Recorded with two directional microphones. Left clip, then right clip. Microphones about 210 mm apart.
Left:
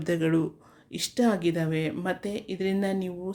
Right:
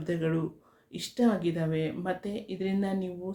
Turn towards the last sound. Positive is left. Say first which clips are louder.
# left 4 dB
turn(degrees=45)  # may be behind; listen again after turning